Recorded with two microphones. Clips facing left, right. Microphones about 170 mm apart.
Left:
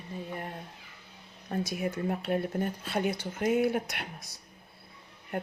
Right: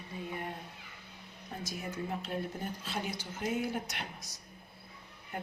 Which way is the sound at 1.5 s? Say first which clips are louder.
Left 9 dB; 65° left (ahead or behind).